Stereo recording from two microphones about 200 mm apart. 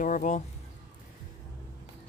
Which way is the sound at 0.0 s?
40° left (ahead or behind).